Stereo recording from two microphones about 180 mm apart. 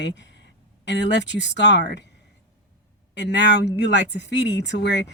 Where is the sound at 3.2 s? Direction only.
75° left (ahead or behind).